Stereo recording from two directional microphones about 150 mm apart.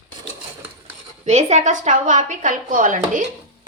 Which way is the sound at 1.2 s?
50° right (ahead or behind).